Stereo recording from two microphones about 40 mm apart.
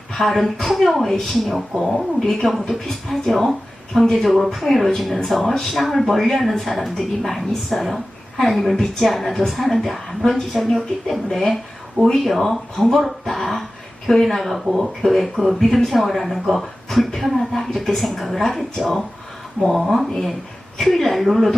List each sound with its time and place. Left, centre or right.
0.1 s a woman's voice: centre